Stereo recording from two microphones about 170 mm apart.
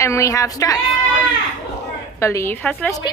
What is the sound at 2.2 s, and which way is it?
Speech, 15° left (ahead or behind).